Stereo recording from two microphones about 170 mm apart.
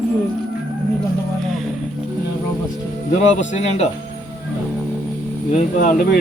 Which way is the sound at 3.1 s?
40° left (ahead or behind).